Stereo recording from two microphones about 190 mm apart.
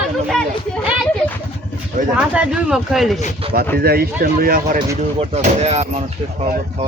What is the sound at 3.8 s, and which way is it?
Speech, 55° right (ahead or behind).